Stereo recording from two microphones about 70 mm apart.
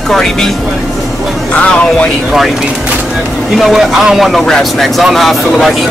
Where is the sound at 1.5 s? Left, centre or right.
Centre.